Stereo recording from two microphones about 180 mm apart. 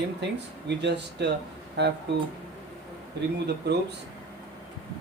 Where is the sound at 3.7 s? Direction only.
65° right (ahead or behind).